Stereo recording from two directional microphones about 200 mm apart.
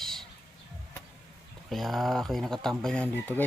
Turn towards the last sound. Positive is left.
turn(degrees=5)  # may be behind; listen again after turning